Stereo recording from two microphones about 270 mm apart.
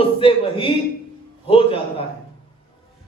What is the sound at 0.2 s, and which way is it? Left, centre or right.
Speech, centre.